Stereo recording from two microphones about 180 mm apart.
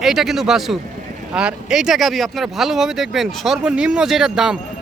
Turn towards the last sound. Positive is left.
turn(degrees=0)  # may be behind; listen again after turning